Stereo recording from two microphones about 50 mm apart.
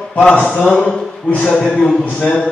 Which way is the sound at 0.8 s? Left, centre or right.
Left.